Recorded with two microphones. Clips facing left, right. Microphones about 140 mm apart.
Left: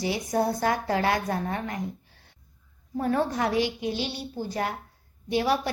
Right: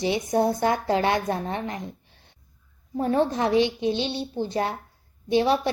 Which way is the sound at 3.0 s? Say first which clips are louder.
Right 3 dB; 25° right (ahead or behind).